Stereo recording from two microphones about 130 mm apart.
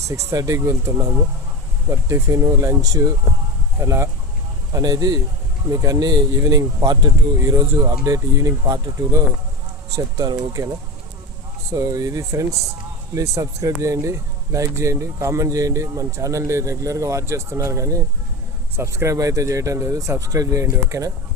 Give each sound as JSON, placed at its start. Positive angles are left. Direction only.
{"t": 0.3, "sound": "speech", "side_deg": -25}
{"t": 11.7, "sound": "speech", "side_deg": -25}